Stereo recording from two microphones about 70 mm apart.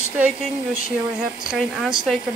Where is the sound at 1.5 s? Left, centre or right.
Centre.